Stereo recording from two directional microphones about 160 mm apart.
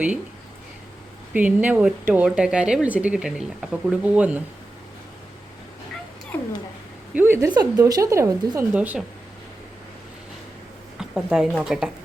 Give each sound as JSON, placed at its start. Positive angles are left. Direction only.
{"t": 1.3, "sound": "speech", "side_deg": -10}
{"t": 6.3, "sound": "cat", "side_deg": 10}
{"t": 7.1, "sound": "a woman's voice", "side_deg": -15}
{"t": 11.1, "sound": "speech", "side_deg": -5}